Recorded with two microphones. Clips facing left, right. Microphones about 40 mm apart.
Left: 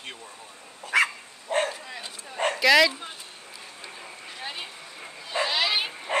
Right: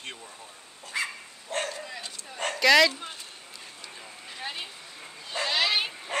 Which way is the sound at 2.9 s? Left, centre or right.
Centre.